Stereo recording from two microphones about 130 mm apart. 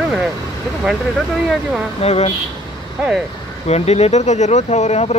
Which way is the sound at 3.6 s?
55° left (ahead or behind).